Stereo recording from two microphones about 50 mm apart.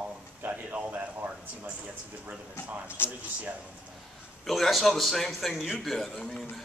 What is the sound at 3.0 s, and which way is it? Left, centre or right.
Speech, left.